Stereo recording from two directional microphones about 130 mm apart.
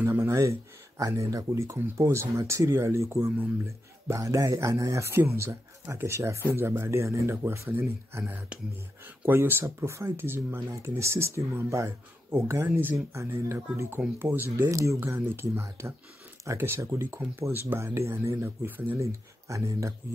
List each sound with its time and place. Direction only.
0.0 s speech: 20° right (ahead or behind)